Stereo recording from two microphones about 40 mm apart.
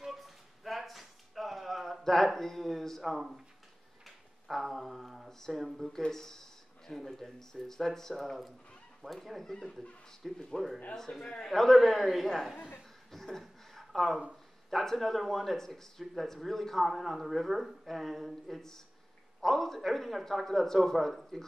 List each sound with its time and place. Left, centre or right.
0.0 s a sound: centre
3.0 s a man's voice: centre
9.5 s speech: centre
10.2 s a man's voice: centre
11.0 s a man's voice: centre
13.1 s a sound: centre
14.7 s a man's voice: centre
15.5 s a man's voice: centre